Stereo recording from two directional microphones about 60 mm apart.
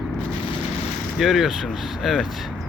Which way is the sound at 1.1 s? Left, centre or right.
Centre.